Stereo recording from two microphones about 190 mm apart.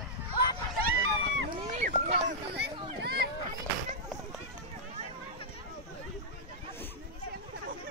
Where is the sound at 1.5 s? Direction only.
35° right (ahead or behind).